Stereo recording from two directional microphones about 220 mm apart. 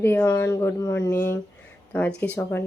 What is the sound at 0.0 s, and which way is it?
Speech, 10° left (ahead or behind).